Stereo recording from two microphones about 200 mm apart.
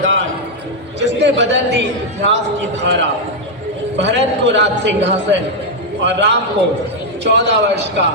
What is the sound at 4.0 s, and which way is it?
A man's voice, 60° right (ahead or behind).